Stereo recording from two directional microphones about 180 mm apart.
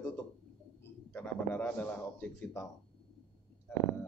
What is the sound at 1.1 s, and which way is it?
A man's voice, 10° left (ahead or behind).